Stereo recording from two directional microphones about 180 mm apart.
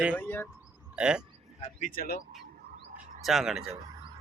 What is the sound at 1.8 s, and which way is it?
Speech, 55° left (ahead or behind).